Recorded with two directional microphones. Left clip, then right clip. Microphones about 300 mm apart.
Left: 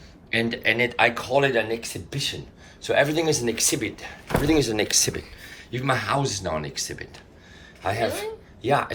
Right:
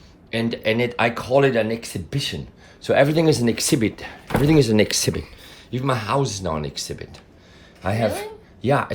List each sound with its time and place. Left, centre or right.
0.3 s speech: centre